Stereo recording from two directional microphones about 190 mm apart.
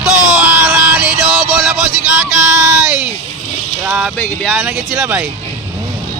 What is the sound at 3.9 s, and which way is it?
Speech, 5° right (ahead or behind).